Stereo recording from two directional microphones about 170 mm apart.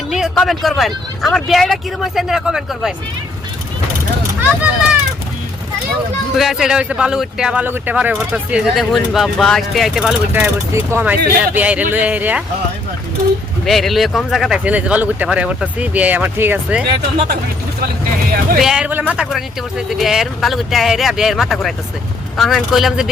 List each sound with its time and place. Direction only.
0.1 s speech: centre (ahead or behind)
4.4 s a sound: 10° right (ahead or behind)
6.3 s speech: centre (ahead or behind)
13.7 s speech: centre (ahead or behind)
18.6 s speech: 5° right (ahead or behind)